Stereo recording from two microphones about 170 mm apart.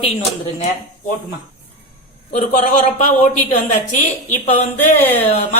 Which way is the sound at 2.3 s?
45° left (ahead or behind).